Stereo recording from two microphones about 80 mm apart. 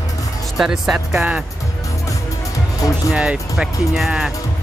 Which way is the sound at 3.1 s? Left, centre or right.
Centre.